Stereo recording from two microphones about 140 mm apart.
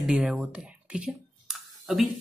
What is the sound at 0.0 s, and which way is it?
Speech, 5° right (ahead or behind).